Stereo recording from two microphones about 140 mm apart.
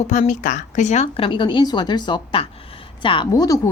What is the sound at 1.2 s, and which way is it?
Speech, 35° left (ahead or behind).